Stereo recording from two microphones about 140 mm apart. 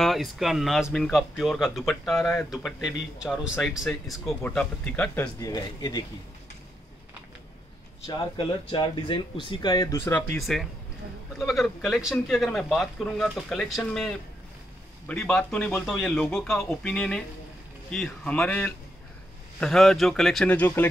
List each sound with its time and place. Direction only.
0.0 s speech: centre (ahead or behind)
5.4 s speech: 30° left (ahead or behind)
8.6 s speech: 35° left (ahead or behind)
10.0 s speech: 15° left (ahead or behind)
10.3 s speech: centre (ahead or behind)